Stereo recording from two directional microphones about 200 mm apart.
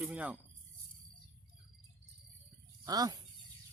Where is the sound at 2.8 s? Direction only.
20° right (ahead or behind).